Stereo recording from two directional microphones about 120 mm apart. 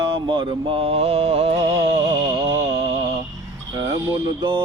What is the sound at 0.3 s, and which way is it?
Mantra, 45° right (ahead or behind).